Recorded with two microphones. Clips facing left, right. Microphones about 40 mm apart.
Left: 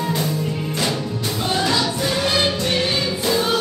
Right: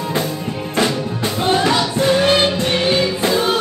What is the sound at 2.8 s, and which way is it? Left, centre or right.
Music, right.